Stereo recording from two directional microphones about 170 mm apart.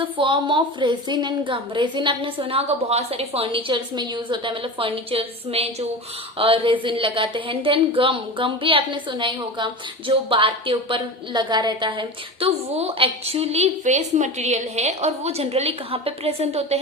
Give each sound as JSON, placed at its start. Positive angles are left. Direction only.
{"t": 0.0, "sound": "a woman's voice", "side_deg": -30}